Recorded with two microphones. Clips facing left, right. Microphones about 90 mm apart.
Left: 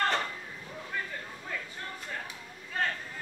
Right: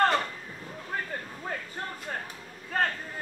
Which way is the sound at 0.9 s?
45° right (ahead or behind).